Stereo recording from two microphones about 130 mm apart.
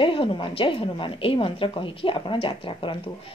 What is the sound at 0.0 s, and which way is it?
Speech, 40° left (ahead or behind).